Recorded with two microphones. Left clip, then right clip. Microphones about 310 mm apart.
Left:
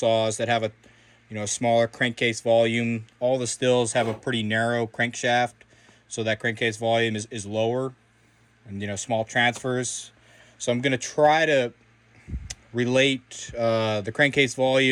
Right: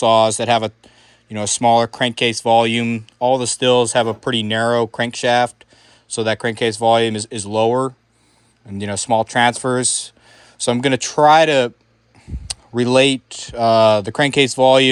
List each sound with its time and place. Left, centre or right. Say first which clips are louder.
0.0 s speech: right 9 dB; centre
7.6 s speech: right 9 dB; right
9.4 s speech: right 8 dB; centre